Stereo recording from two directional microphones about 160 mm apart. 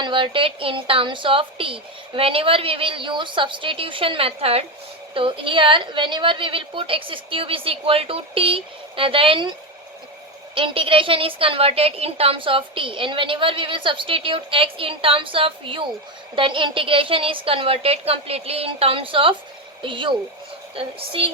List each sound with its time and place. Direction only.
0.0 s a woman's voice: 30° right (ahead or behind)
10.5 s a woman's voice: 35° right (ahead or behind)